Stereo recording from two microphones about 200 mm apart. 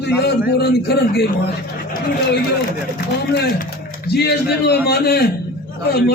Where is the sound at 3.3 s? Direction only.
55° left (ahead or behind).